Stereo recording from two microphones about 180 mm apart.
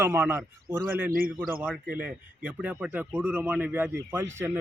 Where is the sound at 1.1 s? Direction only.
55° right (ahead or behind).